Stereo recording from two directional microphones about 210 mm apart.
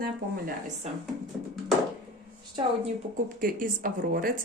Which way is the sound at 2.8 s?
40° right (ahead or behind).